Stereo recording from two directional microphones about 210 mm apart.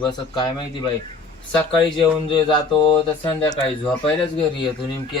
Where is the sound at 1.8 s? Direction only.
20° left (ahead or behind).